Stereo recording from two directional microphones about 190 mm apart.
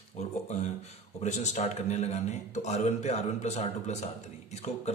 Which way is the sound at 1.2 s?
40° left (ahead or behind).